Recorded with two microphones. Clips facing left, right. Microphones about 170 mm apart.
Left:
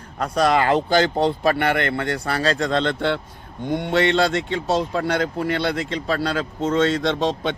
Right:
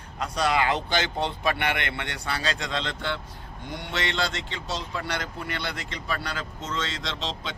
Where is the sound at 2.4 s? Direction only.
35° left (ahead or behind).